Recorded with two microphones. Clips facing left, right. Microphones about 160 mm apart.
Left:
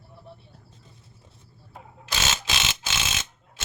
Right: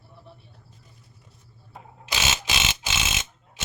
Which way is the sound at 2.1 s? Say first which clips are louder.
Right 1 dB; 10° right (ahead or behind).